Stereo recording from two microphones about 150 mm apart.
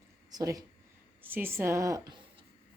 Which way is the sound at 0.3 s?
25° right (ahead or behind).